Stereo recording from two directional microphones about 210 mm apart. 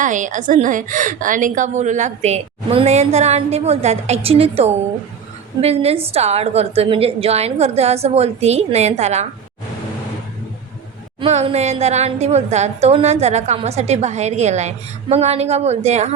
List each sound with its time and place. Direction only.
0.0 s a woman's voice: 35° right (ahead or behind)
11.2 s a woman's voice: 30° right (ahead or behind)